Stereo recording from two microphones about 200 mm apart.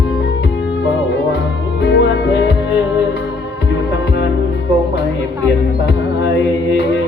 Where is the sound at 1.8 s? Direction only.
60° left (ahead or behind).